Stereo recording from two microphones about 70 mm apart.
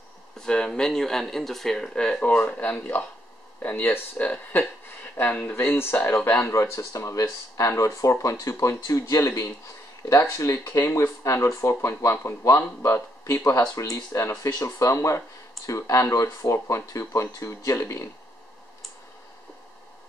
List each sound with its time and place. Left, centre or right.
0.4 s speech: centre; by 6.3 s left
6.4 s speech: left